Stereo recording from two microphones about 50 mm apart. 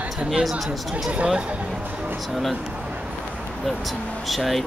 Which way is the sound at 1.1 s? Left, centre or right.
Right.